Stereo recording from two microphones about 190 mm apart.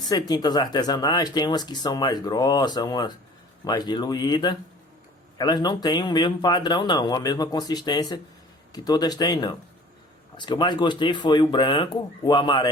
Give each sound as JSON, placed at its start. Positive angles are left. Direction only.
{"t": 0.1, "sound": "speech", "side_deg": 20}